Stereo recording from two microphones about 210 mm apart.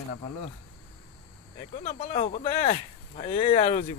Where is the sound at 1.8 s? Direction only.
30° left (ahead or behind).